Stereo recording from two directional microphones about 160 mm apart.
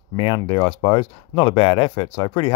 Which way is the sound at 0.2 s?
30° left (ahead or behind).